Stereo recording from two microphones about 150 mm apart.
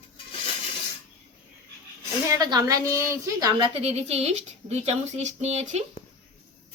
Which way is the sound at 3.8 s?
45° right (ahead or behind).